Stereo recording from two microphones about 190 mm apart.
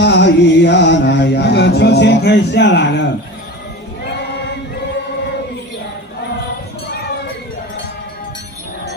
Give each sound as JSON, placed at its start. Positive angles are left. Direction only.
{"t": 0.0, "sound": "music", "side_deg": 65}